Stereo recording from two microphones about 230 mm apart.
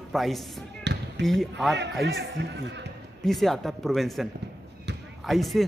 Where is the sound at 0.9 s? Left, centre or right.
Right.